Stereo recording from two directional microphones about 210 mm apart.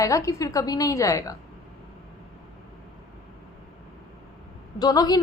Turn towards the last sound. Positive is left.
turn(degrees=15)  # may be behind; listen again after turning